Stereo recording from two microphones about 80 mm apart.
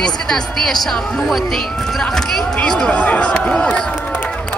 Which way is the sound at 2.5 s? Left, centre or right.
Centre.